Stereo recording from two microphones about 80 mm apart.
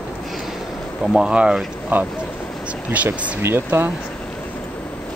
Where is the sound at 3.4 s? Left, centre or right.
Right.